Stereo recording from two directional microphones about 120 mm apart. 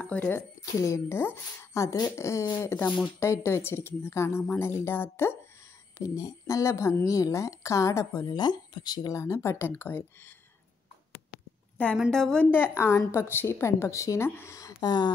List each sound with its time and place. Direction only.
0.0 s speech: 15° left (ahead or behind)
5.9 s speech: 30° left (ahead or behind)
12.1 s a woman's voice: 5° left (ahead or behind)
12.4 s speech: 15° left (ahead or behind); by 15.0 s 35° left (ahead or behind)